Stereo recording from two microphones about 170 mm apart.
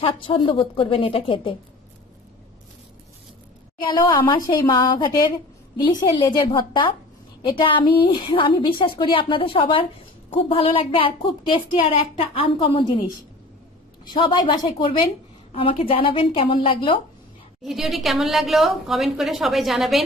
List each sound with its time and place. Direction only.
0.0 s a woman's voice: 30° left (ahead or behind)
3.8 s a woman's voice: 25° left (ahead or behind)
14.0 s a woman's voice: 25° left (ahead or behind)
17.6 s a woman's voice: centre (ahead or behind)